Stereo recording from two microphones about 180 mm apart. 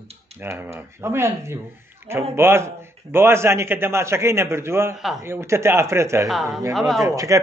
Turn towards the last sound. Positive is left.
turn(degrees=-20)  # may be behind; listen again after turning